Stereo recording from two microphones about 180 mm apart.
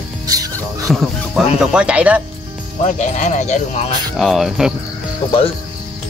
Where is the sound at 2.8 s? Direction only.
40° left (ahead or behind).